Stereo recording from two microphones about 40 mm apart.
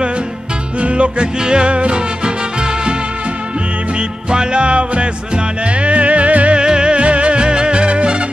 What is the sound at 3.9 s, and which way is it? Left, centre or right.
Music, right.